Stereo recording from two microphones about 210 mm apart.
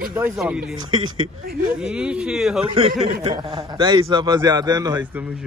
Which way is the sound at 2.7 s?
25° right (ahead or behind).